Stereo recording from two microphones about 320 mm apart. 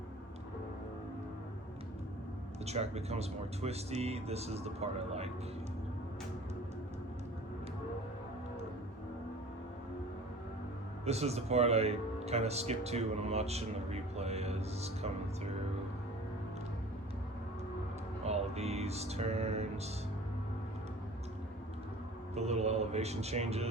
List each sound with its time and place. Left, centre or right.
2.6 s speech: centre
11.0 s speech: centre
18.3 s music: centre
22.4 s speech: centre